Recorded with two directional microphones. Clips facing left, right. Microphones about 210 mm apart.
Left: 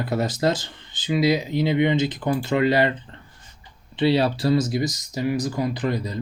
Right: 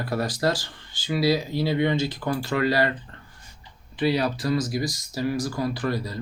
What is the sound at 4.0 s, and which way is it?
Speech, 25° left (ahead or behind).